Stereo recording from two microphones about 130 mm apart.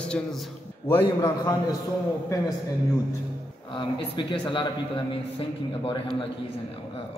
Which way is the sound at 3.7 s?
35° left (ahead or behind).